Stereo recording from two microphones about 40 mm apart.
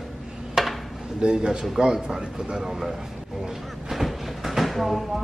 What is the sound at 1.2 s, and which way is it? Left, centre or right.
A man's voice, right.